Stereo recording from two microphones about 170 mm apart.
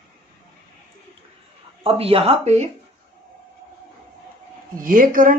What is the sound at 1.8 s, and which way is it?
Speech, 35° right (ahead or behind).